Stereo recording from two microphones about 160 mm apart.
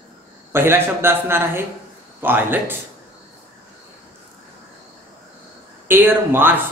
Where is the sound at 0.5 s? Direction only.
15° right (ahead or behind).